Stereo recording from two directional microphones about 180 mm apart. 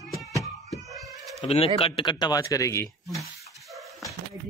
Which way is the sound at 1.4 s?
30° left (ahead or behind).